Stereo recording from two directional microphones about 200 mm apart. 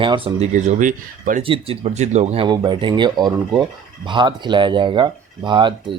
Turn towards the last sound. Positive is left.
turn(degrees=-25)  # may be behind; listen again after turning